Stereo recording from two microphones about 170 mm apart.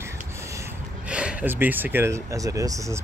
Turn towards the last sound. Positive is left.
turn(degrees=-20)  # may be behind; listen again after turning